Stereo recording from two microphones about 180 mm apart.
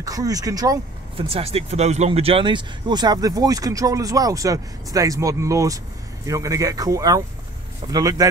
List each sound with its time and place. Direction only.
0.0 s speech: 20° right (ahead or behind)
1.3 s speech: 35° right (ahead or behind)